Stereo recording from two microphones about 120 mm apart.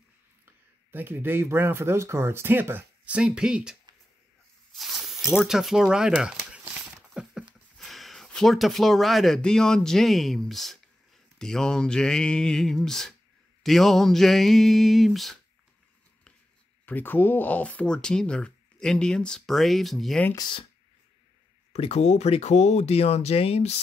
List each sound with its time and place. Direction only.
0.9 s speech: 15° right (ahead or behind)
3.2 s speech: 5° right (ahead or behind)
4.7 s snake: centre (ahead or behind)
5.3 s a sound: 5° right (ahead or behind)
7.7 s speech: centre (ahead or behind)
11.3 s a sound: 5° left (ahead or behind)
16.8 s speech: 15° left (ahead or behind)
20.3 s speech: 40° left (ahead or behind)
21.7 s speech: 60° left (ahead or behind)